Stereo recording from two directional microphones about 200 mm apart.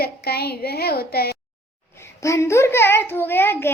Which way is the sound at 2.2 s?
15° left (ahead or behind).